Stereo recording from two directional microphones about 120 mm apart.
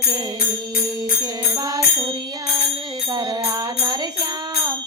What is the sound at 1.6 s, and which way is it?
Music, 30° right (ahead or behind).